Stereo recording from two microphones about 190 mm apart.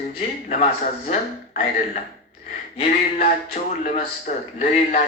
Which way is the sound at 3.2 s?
50° left (ahead or behind).